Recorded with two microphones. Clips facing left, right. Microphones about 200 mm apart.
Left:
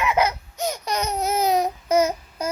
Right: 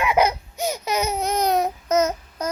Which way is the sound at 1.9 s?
10° left (ahead or behind).